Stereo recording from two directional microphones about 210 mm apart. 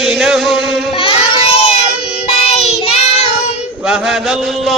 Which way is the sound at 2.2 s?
30° left (ahead or behind).